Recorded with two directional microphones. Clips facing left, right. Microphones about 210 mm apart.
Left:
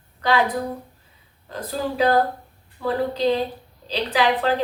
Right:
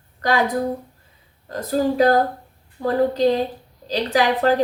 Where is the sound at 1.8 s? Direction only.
45° right (ahead or behind).